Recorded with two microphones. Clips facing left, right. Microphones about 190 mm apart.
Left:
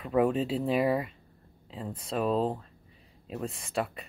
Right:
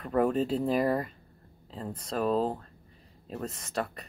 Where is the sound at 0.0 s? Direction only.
5° left (ahead or behind).